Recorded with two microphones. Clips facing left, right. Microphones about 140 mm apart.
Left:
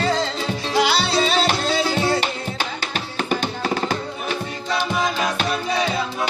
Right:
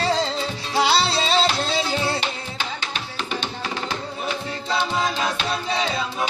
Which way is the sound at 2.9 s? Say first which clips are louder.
Left 5 dB; 45° left (ahead or behind).